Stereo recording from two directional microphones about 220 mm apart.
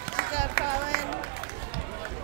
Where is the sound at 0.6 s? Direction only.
45° left (ahead or behind).